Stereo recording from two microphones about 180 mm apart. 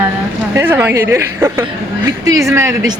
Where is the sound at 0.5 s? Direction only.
15° right (ahead or behind).